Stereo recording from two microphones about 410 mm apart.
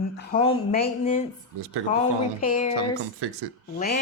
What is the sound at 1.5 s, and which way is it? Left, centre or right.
Speech, right.